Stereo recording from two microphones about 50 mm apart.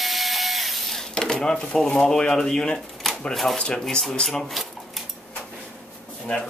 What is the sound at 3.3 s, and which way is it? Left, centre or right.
Speech, centre.